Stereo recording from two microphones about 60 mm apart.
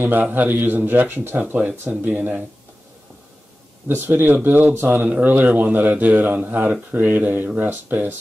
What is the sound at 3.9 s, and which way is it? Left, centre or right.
A man's voice, right.